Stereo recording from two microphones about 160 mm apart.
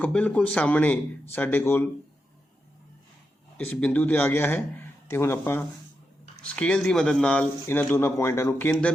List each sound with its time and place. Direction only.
0.0 s speech: 10° left (ahead or behind)
3.7 s speech: 10° left (ahead or behind)